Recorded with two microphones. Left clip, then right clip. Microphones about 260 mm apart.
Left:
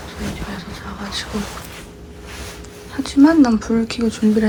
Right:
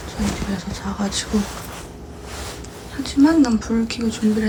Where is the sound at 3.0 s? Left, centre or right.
Centre.